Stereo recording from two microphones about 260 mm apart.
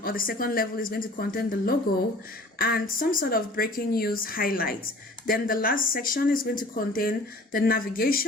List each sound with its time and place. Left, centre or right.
0.0 s speech: left